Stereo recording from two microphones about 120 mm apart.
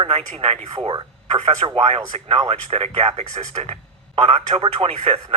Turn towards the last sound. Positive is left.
turn(degrees=-55)  # may be behind; listen again after turning